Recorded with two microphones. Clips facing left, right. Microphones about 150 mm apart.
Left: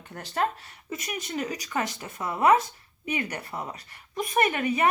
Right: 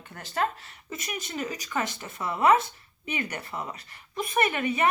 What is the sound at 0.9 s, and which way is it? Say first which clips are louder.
Speech: left 2 dB; 35° left (ahead or behind).